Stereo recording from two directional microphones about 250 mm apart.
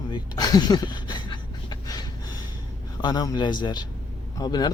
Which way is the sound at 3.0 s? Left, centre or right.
Centre.